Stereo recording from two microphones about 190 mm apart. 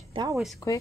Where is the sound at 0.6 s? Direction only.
15° left (ahead or behind).